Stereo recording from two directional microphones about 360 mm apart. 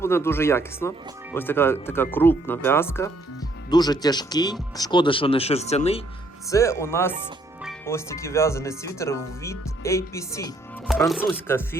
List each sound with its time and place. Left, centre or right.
0.0 s speech: centre